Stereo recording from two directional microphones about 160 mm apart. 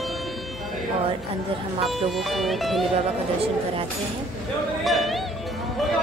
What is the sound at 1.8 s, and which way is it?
Speech, centre (ahead or behind).